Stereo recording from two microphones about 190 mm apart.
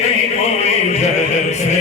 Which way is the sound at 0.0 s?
35° left (ahead or behind).